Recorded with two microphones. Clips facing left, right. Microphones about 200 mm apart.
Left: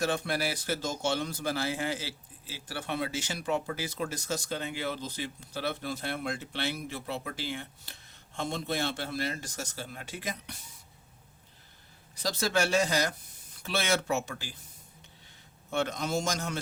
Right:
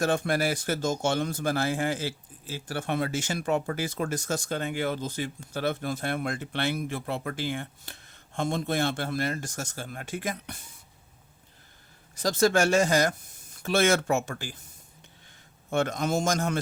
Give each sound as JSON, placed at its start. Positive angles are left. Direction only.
{"t": 0.0, "sound": "speech", "side_deg": -50}
{"t": 12.1, "sound": "speech", "side_deg": -50}
{"t": 15.7, "sound": "speech", "side_deg": -50}